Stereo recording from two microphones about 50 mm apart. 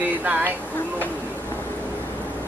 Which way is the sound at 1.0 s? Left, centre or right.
Left.